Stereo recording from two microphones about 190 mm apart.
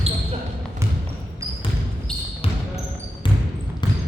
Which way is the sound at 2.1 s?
5° left (ahead or behind).